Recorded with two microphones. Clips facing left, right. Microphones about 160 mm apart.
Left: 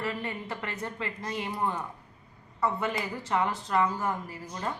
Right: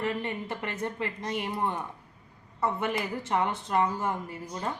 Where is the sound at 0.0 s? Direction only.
20° right (ahead or behind).